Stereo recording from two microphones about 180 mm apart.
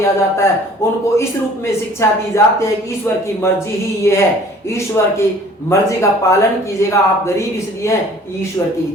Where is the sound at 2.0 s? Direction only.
15° left (ahead or behind).